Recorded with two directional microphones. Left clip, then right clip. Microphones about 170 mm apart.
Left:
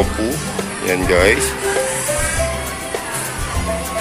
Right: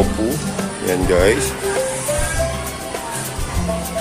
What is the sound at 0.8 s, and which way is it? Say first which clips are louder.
Speech: left 1 dB; 20° right (ahead or behind).